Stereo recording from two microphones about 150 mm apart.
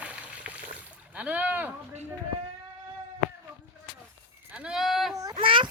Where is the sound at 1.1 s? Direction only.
10° right (ahead or behind).